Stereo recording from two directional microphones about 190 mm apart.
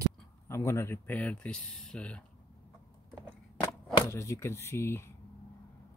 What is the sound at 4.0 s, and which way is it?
Speech, 15° left (ahead or behind).